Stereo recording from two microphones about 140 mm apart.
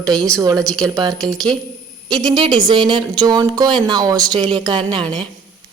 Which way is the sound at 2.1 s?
30° right (ahead or behind).